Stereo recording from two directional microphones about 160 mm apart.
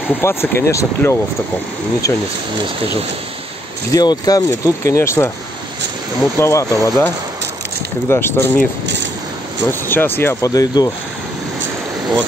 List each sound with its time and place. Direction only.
0.2 s speech: 15° left (ahead or behind)
3.9 s speech: 25° left (ahead or behind)
6.3 s speech: 20° left (ahead or behind)
8.1 s speech: 15° left (ahead or behind)
9.7 s speech: 15° left (ahead or behind)